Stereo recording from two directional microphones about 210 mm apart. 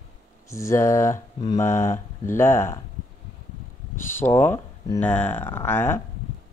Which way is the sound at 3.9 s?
10° left (ahead or behind).